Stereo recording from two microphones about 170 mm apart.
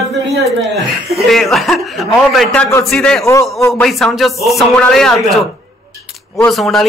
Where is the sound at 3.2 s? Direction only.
15° left (ahead or behind).